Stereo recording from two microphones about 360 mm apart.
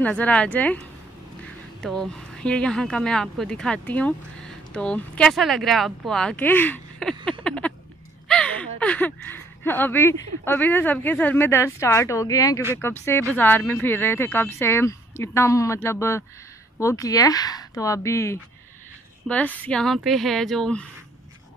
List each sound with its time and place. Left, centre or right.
0.0 s speech: centre
7.2 s a sound: centre
8.3 s speech: centre